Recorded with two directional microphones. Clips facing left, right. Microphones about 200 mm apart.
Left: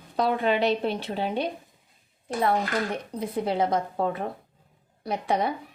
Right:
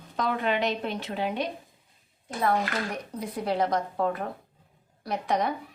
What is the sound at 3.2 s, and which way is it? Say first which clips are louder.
Speech: left 2 dB; 25° left (ahead or behind).